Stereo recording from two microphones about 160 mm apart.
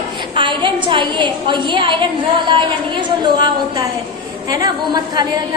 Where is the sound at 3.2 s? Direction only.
25° right (ahead or behind).